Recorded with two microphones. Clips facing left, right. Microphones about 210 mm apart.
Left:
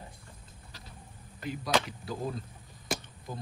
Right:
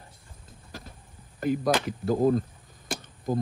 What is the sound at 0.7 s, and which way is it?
Vehicle, 50° right (ahead or behind).